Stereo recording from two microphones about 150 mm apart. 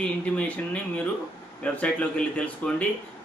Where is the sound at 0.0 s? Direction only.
10° left (ahead or behind).